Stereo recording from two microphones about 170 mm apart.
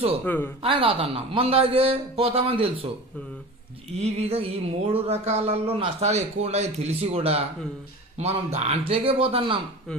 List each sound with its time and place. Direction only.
0.2 s speech: 10° left (ahead or behind)
0.6 s speech: 30° right (ahead or behind)
4.0 s speech: 35° right (ahead or behind)